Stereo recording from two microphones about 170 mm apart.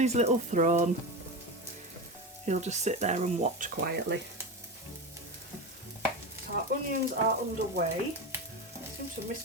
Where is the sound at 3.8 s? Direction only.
70° right (ahead or behind).